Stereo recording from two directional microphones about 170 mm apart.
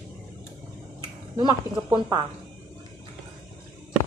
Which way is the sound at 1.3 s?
25° right (ahead or behind).